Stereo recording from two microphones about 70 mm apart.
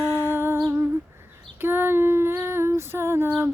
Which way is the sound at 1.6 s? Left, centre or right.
Right.